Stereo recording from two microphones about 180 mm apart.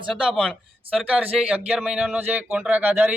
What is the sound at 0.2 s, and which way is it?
A man's voice, centre (ahead or behind).